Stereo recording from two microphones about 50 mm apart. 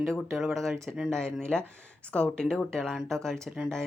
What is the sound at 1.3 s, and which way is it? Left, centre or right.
Speech, centre.